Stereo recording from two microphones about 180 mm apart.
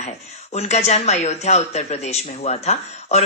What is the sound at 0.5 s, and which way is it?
A woman's voice, 35° left (ahead or behind).